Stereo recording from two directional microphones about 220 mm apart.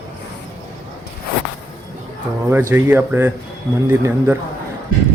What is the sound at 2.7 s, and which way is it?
Speech, 10° right (ahead or behind).